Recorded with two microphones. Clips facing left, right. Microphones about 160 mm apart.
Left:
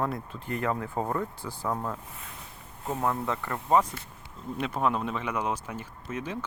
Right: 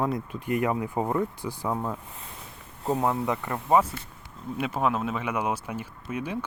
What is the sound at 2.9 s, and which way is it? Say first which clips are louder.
Speech: right 2 dB; 15° right (ahead or behind).